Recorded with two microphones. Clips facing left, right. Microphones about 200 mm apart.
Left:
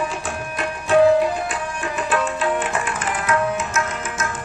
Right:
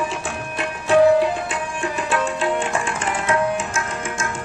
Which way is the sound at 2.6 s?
25° right (ahead or behind).